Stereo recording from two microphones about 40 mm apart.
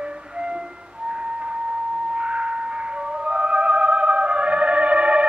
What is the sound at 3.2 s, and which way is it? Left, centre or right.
Music, right.